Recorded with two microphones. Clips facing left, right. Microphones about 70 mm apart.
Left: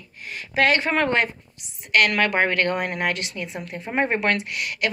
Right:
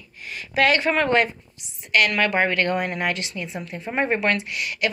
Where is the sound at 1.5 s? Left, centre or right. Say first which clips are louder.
Left 1 dB; left.